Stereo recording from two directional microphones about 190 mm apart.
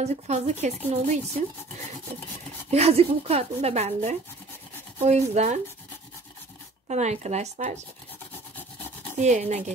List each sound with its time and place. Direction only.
0.0 s speech: 35° right (ahead or behind)
2.7 s speech: 35° right (ahead or behind)
6.9 s speech: 35° right (ahead or behind)
9.2 s speech: 35° right (ahead or behind)